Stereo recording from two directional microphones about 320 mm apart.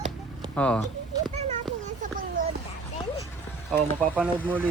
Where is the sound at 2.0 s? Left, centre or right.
Right.